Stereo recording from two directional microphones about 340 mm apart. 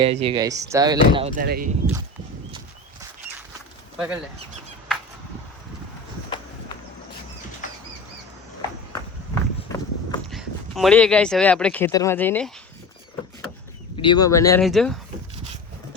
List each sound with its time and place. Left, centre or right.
0.0 s speech: centre
3.9 s speech: centre
9.3 s run: centre
10.2 s speech: centre
13.9 s speech: centre